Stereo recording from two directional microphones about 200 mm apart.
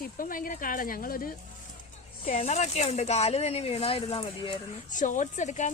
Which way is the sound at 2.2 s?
35° left (ahead or behind).